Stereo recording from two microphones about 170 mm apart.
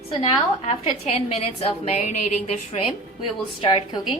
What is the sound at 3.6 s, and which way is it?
Speech, 30° left (ahead or behind).